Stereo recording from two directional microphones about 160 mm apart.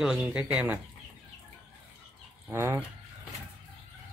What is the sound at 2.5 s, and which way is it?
Speech, 20° right (ahead or behind).